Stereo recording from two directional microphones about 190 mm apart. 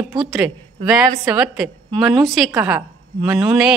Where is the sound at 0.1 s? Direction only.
Centre (ahead or behind).